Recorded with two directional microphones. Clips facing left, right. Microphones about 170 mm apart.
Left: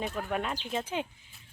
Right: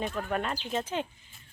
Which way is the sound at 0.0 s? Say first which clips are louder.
Right 1 dB; 5° left (ahead or behind).